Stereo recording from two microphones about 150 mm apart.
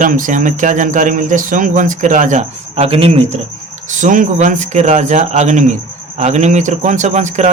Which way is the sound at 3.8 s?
60° right (ahead or behind).